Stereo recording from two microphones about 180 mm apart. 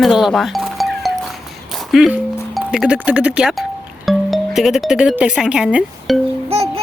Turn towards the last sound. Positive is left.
turn(degrees=-35)  # may be behind; listen again after turning